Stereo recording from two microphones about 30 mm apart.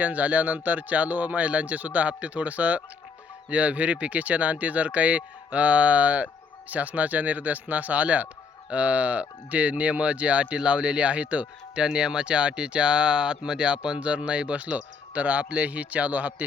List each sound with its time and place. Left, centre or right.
0.0 s speech: right
11.8 s speech: right